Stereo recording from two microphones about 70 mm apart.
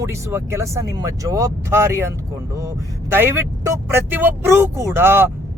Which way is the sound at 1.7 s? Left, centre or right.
Right.